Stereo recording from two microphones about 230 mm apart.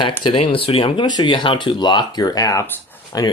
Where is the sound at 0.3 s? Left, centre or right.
Left.